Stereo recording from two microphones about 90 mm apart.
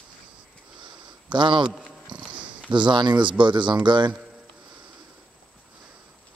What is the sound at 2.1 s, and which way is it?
Sniff, 60° right (ahead or behind).